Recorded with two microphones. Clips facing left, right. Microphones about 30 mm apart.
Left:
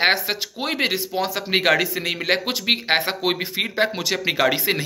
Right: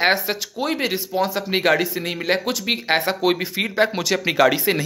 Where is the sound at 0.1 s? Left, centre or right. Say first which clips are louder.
Right 1 dB; left.